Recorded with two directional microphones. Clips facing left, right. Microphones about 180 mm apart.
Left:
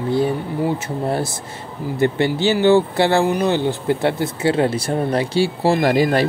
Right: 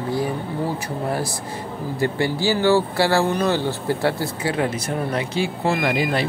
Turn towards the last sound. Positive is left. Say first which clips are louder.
# left 5 dB
turn(degrees=40)  # may be behind; listen again after turning